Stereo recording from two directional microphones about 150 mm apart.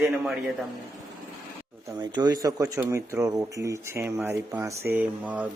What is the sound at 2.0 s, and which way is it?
Speech, 30° right (ahead or behind).